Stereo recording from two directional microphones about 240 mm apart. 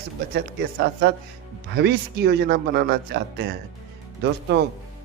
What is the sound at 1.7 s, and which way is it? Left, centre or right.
Speech, right.